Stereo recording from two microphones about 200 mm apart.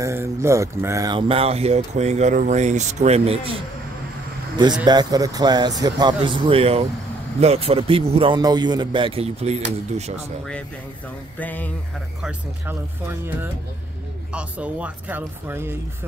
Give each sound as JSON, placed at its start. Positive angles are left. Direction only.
{"t": 0.0, "sound": "speech", "side_deg": -10}
{"t": 4.8, "sound": "a man's voice", "side_deg": -20}
{"t": 11.3, "sound": "a sound", "side_deg": 10}
{"t": 12.2, "sound": "speech", "side_deg": -5}
{"t": 14.3, "sound": "speech", "side_deg": -5}